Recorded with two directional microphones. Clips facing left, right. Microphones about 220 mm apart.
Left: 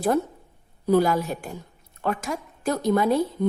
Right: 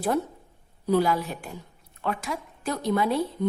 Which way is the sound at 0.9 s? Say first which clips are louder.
Left 3 dB; 45° left (ahead or behind).